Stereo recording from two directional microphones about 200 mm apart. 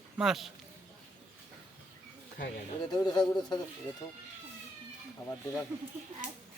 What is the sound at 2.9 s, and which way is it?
Speech, 20° left (ahead or behind).